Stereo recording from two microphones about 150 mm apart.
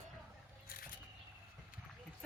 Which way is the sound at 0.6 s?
70° left (ahead or behind).